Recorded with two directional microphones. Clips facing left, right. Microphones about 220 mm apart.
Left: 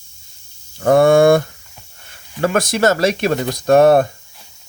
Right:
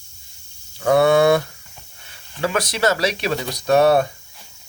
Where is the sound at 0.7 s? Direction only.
45° left (ahead or behind).